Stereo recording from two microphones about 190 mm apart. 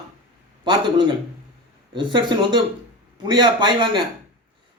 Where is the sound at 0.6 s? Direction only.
25° right (ahead or behind).